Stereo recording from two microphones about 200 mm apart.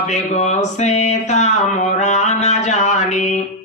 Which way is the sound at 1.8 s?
35° left (ahead or behind).